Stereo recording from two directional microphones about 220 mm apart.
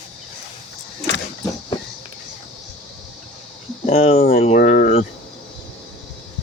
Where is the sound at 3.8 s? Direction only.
30° left (ahead or behind).